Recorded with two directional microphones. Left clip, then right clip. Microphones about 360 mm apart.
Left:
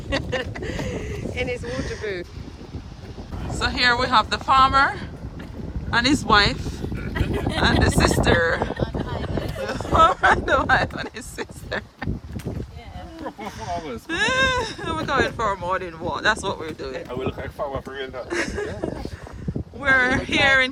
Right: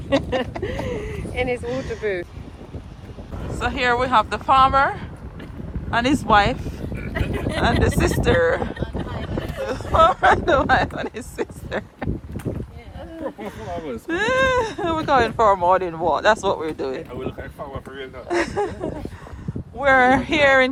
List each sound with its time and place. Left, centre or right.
0.6 s a sound: centre
1.6 s speech: centre
3.5 s speech: centre
13.2 s speech: centre
17.6 s speech: left
18.3 s speech: centre